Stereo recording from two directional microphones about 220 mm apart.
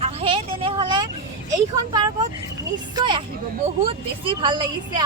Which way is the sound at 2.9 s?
20° right (ahead or behind).